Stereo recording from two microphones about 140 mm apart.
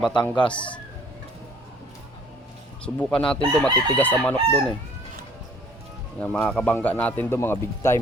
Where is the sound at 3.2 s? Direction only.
40° left (ahead or behind).